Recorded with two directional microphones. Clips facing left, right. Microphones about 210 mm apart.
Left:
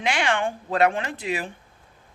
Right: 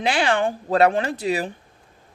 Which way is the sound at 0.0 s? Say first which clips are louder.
Right 4 dB; 35° right (ahead or behind).